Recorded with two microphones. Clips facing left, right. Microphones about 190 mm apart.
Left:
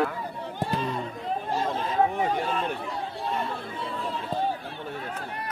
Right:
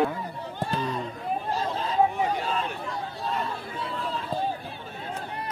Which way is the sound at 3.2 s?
25° left (ahead or behind).